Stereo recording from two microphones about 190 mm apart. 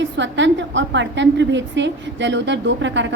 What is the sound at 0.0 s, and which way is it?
A woman's voice, 70° right (ahead or behind).